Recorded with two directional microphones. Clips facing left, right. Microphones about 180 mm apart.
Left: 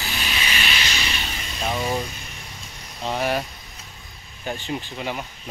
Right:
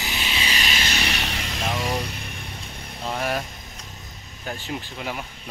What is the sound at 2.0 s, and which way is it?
Music, 60° right (ahead or behind).